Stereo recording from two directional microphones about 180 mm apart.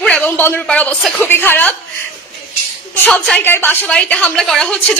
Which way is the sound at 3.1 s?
5° left (ahead or behind).